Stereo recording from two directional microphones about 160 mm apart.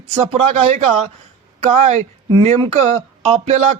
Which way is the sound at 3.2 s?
40° right (ahead or behind).